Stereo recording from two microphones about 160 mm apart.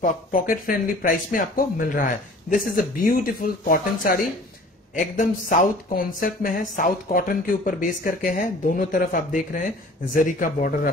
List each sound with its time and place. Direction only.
0.0 s speech: 55° left (ahead or behind)